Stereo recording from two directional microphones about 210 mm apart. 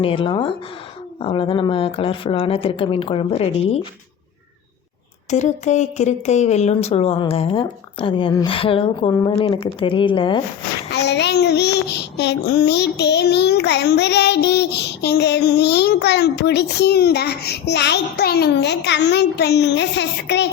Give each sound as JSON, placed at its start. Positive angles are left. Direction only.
{"t": 0.0, "sound": "speech", "side_deg": 25}
{"t": 5.3, "sound": "speech", "side_deg": 35}
{"t": 10.9, "sound": "child singing", "side_deg": 55}